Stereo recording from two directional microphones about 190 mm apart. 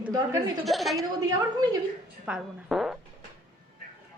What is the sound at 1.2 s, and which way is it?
Speech, 20° right (ahead or behind).